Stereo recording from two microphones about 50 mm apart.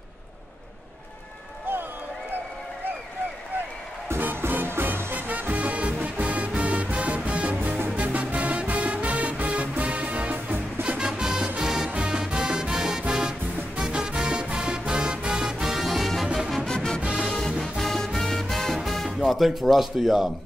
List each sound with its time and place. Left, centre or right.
4.2 s music: right
11.1 s music: centre
16.6 s music: centre
17.0 s music: right
17.6 s music: centre
19.0 s speech: centre